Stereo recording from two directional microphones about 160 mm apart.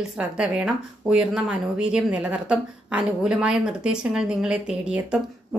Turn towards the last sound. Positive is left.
turn(degrees=-5)  # may be behind; listen again after turning